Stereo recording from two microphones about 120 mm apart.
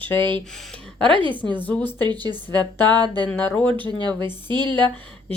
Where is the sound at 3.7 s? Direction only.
40° right (ahead or behind).